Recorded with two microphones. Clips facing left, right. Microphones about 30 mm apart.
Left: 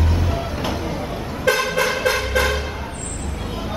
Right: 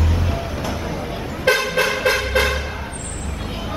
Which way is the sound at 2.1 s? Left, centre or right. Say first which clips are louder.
Right 1 dB; right.